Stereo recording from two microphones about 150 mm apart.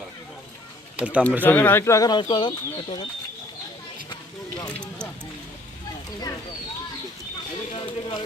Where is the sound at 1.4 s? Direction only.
10° left (ahead or behind); by 2.5 s 30° left (ahead or behind).